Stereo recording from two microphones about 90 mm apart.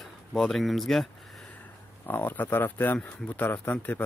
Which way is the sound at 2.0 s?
20° left (ahead or behind).